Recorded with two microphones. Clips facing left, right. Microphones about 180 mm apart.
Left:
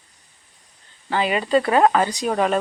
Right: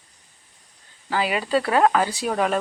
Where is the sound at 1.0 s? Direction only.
5° right (ahead or behind).